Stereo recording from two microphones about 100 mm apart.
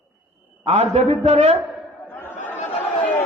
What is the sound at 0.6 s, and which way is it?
Speech, 90° right.